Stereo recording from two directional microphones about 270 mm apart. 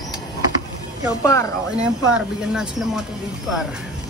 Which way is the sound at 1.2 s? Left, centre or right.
Centre.